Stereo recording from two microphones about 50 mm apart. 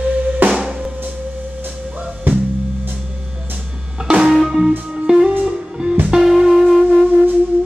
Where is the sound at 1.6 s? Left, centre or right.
Right.